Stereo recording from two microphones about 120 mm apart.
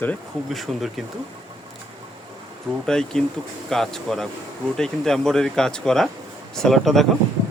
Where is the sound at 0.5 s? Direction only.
Centre (ahead or behind).